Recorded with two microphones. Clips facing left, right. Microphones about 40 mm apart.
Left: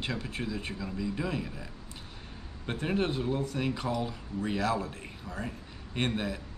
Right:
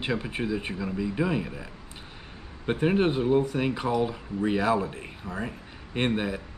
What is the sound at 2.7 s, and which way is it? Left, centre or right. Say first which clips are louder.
Speech: right 7 dB; right.